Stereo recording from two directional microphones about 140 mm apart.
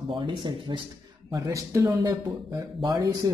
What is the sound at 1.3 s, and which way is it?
Speech, 25° right (ahead or behind).